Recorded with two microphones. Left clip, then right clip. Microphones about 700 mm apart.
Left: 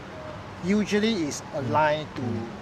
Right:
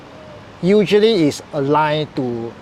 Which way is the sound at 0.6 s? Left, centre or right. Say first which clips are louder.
Right 13 dB; right.